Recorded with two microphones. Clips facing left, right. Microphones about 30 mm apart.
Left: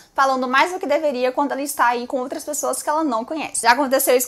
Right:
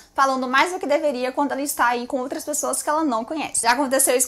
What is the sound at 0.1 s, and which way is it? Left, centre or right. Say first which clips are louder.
A woman's voice: left 2 dB; centre.